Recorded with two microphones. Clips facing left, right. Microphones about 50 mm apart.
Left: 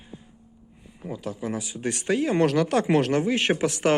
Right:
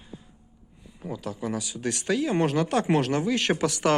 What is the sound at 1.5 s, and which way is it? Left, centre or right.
Speech, left.